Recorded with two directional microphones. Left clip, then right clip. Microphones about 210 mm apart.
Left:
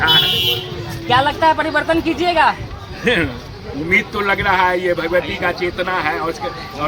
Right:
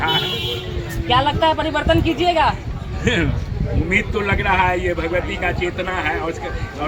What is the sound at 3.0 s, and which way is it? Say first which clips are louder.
A man's voice: left 3 dB; 10° right (ahead or behind).